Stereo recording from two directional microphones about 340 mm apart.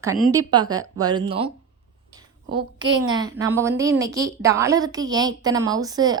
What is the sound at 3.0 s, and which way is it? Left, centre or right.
Speech, centre.